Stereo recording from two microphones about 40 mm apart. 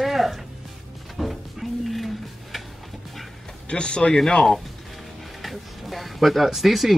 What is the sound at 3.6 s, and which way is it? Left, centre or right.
Speech, left.